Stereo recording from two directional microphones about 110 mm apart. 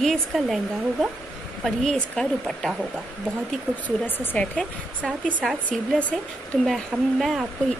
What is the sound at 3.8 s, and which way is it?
Speech, 15° left (ahead or behind).